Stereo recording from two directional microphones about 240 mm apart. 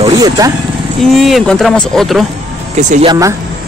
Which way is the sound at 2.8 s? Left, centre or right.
Right.